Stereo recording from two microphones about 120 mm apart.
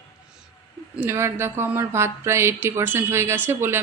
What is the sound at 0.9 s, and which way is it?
Speech, 20° right (ahead or behind).